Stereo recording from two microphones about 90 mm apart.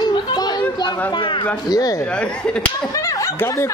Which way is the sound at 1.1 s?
60° left (ahead or behind).